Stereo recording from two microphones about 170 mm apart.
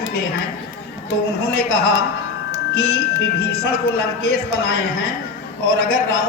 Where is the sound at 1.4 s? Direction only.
65° left (ahead or behind).